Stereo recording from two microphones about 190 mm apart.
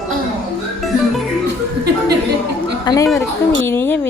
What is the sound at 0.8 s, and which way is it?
Music, centre (ahead or behind).